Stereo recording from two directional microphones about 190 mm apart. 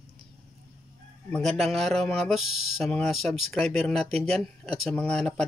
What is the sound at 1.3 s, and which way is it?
A man's voice, centre (ahead or behind).